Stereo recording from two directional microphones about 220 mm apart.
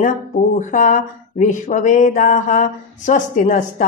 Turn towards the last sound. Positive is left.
turn(degrees=35)  # may be behind; listen again after turning